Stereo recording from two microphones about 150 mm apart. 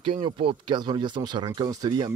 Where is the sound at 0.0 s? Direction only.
35° right (ahead or behind).